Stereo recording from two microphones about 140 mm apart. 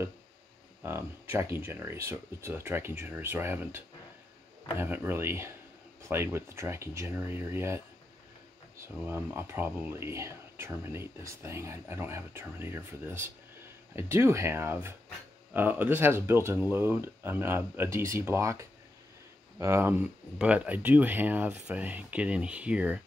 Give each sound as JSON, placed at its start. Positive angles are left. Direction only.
{"t": 0.8, "sound": "speech", "side_deg": -15}